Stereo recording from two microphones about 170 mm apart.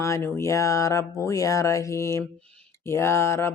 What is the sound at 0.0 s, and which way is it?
Speech, 15° left (ahead or behind).